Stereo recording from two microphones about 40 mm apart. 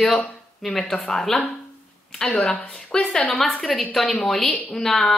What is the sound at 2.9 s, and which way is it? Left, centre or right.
A woman's voice, centre.